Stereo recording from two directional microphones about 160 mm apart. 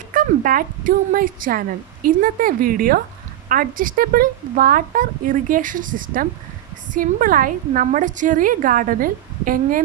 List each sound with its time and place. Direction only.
0.1 s a woman's voice: 60° right (ahead or behind)